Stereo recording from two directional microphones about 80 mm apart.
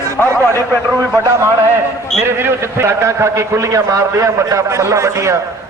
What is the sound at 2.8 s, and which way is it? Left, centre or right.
A man's voice, right.